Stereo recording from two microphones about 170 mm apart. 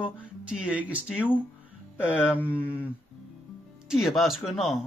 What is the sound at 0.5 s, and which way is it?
Speech, 5° right (ahead or behind).